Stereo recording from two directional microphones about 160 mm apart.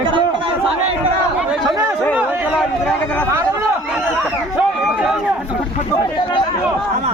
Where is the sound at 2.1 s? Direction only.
10° right (ahead or behind).